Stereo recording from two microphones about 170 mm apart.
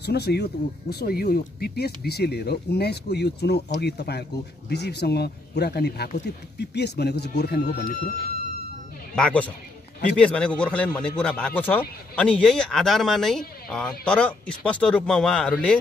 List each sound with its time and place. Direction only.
0.0 s speech: 75° left (ahead or behind)
7.7 s speech: 60° left (ahead or behind)
9.1 s speech: 5° left (ahead or behind)